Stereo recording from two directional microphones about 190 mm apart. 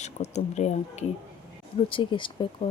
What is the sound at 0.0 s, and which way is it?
Speech, 35° left (ahead or behind).